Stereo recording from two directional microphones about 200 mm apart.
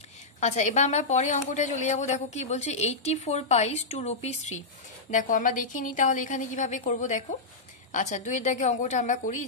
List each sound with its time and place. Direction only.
0.4 s a woman's voice: 35° left (ahead or behind)